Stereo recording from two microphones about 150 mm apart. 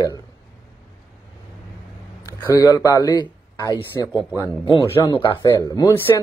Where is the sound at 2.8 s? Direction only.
25° left (ahead or behind).